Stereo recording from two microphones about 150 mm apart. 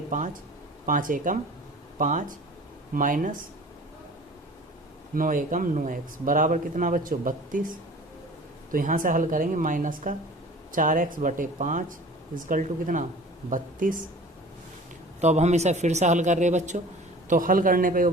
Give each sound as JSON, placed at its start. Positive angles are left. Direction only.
{"t": 0.9, "sound": "speech", "side_deg": -65}
{"t": 5.1, "sound": "speech", "side_deg": -65}
{"t": 8.7, "sound": "speech", "side_deg": -60}
{"t": 15.2, "sound": "speech", "side_deg": -50}
{"t": 17.2, "sound": "speech", "side_deg": -65}